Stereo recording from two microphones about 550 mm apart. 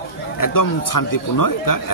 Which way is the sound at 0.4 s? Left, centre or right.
Left.